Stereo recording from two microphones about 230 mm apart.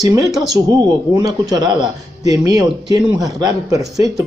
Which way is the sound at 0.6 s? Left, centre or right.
Centre.